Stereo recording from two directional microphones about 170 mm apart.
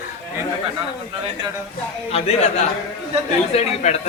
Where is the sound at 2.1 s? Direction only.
40° left (ahead or behind).